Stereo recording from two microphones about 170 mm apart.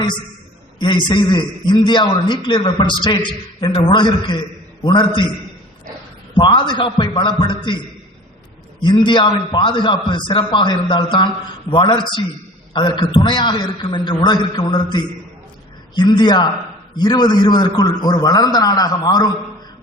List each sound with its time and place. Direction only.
0.8 s a man's voice: 25° left (ahead or behind)
6.3 s a man's voice: 30° left (ahead or behind)
8.8 s a man's voice: 25° left (ahead or behind)